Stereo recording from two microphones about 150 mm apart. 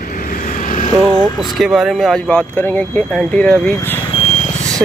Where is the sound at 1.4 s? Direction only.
Centre (ahead or behind).